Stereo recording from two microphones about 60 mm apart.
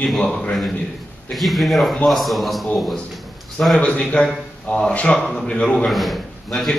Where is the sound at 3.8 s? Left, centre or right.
Centre.